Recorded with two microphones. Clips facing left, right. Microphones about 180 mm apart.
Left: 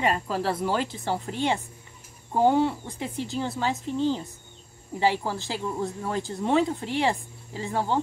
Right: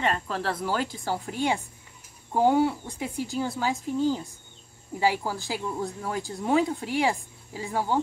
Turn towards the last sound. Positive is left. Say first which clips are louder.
# left 1 dB
turn(degrees=-5)  # may be behind; listen again after turning